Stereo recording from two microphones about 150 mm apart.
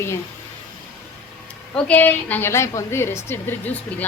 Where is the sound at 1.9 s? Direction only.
10° left (ahead or behind).